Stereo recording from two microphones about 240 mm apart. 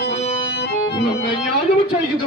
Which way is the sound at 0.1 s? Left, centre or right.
Left.